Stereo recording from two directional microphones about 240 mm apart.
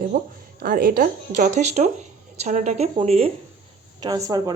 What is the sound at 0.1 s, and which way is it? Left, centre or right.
A woman's voice, right.